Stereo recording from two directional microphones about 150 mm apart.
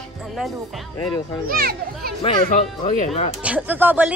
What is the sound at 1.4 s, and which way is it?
Speech, 85° right.